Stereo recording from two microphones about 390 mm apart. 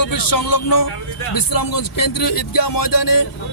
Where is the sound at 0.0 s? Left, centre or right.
Left.